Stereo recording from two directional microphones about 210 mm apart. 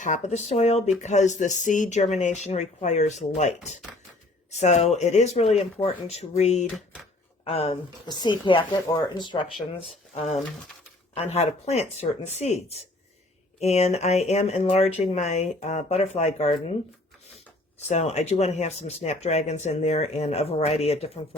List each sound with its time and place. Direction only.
0.0 s speech: 35° left (ahead or behind)
17.7 s speech: 30° left (ahead or behind)